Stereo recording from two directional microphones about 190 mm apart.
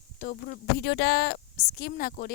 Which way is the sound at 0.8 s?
60° left (ahead or behind).